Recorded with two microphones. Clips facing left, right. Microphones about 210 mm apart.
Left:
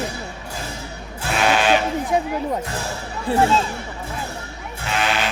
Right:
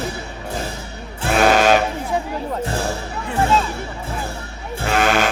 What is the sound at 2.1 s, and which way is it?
Music, 15° left (ahead or behind).